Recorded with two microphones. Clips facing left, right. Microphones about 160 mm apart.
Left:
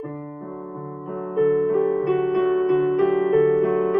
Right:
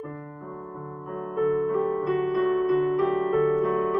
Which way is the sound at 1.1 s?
75° left (ahead or behind).